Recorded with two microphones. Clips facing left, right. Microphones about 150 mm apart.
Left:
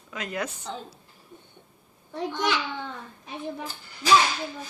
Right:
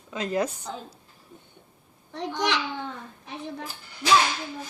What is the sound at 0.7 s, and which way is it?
Speech, 5° right (ahead or behind).